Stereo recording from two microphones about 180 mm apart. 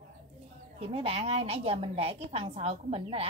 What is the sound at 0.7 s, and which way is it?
A woman's voice, 35° right (ahead or behind).